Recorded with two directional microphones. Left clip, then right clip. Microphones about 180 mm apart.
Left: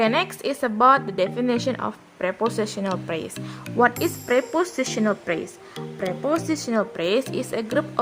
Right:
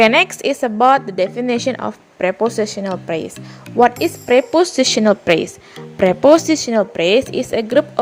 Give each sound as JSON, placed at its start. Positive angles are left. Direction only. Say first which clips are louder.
{"t": 0.0, "sound": "a woman's voice", "louder": "right 9 dB", "side_deg": -25}